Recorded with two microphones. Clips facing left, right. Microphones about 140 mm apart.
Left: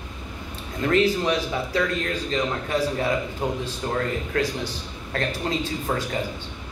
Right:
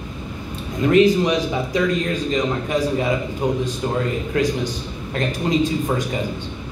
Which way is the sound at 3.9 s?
15° right (ahead or behind).